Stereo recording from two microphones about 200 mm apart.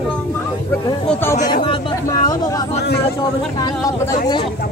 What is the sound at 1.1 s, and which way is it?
Speech, 10° left (ahead or behind).